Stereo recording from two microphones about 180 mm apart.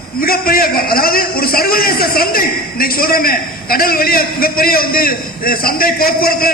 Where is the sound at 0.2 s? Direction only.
55° left (ahead or behind).